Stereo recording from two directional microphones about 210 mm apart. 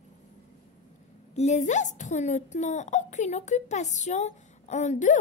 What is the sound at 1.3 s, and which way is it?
A child's voice, 35° left (ahead or behind).